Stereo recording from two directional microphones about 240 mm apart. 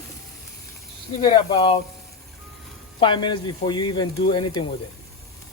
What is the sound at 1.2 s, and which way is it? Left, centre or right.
Speech, centre.